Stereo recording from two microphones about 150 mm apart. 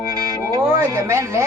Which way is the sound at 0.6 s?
15° right (ahead or behind).